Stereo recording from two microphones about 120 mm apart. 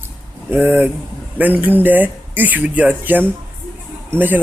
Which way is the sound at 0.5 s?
15° right (ahead or behind).